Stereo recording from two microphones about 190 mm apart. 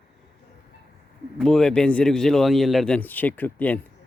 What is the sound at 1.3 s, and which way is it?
A man's voice, 5° left (ahead or behind).